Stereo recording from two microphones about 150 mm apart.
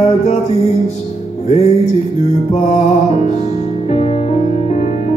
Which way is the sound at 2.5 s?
50° left (ahead or behind).